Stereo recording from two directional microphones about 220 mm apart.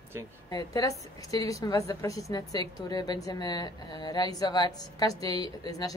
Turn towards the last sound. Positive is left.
turn(degrees=15)  # may be behind; listen again after turning